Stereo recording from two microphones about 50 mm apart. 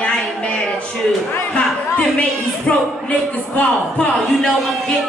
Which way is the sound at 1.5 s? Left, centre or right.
Left.